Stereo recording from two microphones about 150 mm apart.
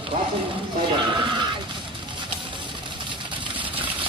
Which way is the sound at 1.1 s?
30° right (ahead or behind).